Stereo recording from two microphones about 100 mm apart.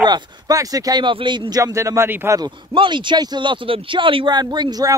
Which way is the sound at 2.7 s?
55° right (ahead or behind).